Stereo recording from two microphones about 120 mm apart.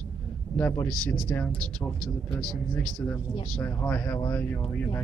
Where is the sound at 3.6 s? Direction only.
15° left (ahead or behind).